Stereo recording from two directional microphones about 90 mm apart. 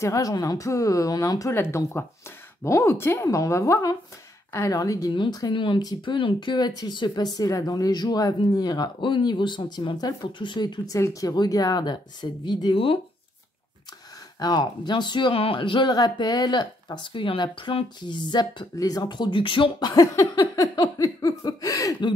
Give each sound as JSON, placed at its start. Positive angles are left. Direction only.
{"t": 0.0, "sound": "a sound", "side_deg": 40}
{"t": 1.5, "sound": "speech", "side_deg": 25}
{"t": 2.6, "sound": "a sound", "side_deg": 30}
{"t": 5.5, "sound": "speech", "side_deg": 65}
{"t": 5.8, "sound": "speech", "side_deg": 45}
{"t": 6.1, "sound": "speech", "side_deg": 65}
{"t": 10.9, "sound": "speech", "side_deg": 35}
{"t": 14.4, "sound": "speech", "side_deg": 55}
{"t": 19.9, "sound": "a sound", "side_deg": 35}